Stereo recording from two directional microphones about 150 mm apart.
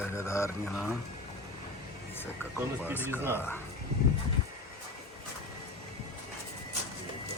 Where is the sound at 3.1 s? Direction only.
15° right (ahead or behind).